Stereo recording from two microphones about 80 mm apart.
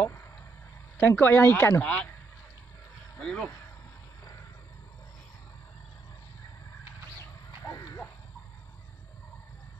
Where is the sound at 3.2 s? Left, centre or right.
Centre.